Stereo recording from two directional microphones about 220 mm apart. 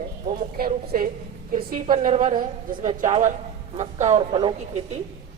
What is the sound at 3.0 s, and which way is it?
A woman's voice, 35° right (ahead or behind).